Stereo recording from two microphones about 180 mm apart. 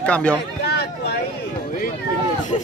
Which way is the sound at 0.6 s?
65° left (ahead or behind).